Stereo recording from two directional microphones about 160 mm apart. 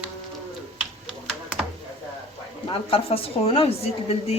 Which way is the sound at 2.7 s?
35° left (ahead or behind).